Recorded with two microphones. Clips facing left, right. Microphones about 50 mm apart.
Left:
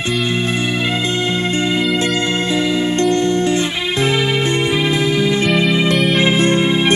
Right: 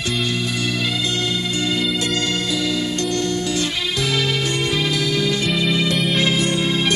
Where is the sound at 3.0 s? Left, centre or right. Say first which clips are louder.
Left 7 dB; left.